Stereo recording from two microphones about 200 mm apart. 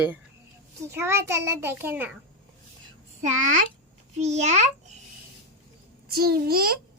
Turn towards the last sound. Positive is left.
turn(degrees=-50)  # may be behind; listen again after turning